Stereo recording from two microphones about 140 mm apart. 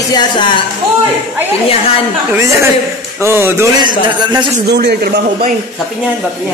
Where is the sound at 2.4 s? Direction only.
20° right (ahead or behind).